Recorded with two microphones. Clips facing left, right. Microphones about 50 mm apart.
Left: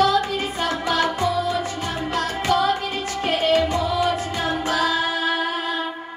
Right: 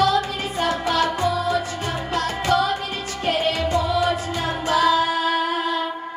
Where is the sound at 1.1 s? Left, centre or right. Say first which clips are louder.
Right 1 dB; right.